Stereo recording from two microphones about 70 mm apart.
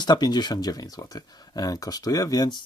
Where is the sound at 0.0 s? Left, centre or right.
Left.